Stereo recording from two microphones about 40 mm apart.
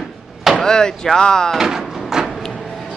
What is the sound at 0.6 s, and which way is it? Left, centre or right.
Speech, centre.